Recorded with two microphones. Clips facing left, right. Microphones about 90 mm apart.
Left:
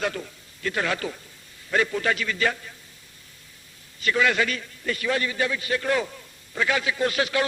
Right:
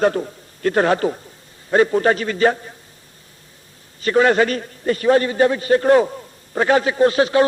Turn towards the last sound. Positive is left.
turn(degrees=-30)  # may be behind; listen again after turning